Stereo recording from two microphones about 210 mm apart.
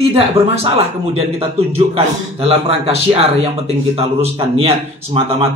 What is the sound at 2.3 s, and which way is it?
Speech, 30° right (ahead or behind).